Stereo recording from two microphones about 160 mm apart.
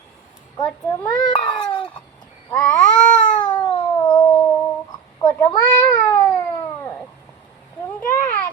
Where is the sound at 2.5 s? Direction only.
5° left (ahead or behind).